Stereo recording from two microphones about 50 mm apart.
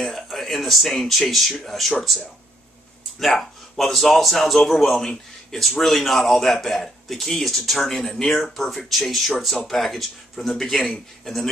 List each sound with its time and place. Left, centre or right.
0.0 s speech: centre
3.2 s speech: centre